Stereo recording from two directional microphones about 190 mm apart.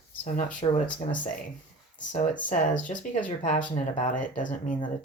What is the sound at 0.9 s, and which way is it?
Speech, 40° left (ahead or behind).